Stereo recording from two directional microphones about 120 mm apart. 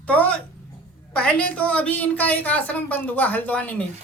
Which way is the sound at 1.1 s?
10° left (ahead or behind).